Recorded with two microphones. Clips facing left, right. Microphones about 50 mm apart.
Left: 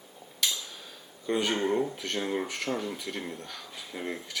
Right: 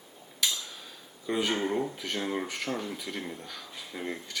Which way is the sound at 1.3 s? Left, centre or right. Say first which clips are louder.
Left 1 dB; centre.